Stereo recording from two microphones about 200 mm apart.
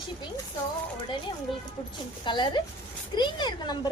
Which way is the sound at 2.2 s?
25° left (ahead or behind).